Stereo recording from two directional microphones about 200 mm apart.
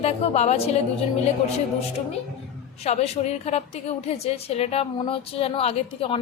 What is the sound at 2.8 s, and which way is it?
A woman's voice, 30° left (ahead or behind).